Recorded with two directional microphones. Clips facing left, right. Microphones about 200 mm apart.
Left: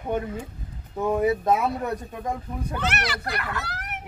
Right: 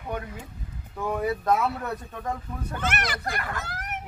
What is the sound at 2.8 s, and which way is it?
A child's voice, 50° right (ahead or behind).